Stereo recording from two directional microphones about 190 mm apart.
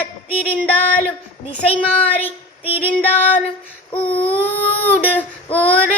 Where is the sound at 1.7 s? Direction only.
10° left (ahead or behind).